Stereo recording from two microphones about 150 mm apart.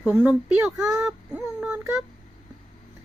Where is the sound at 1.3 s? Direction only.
5° right (ahead or behind).